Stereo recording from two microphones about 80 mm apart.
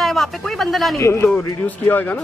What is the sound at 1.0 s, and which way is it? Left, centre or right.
Speech, left.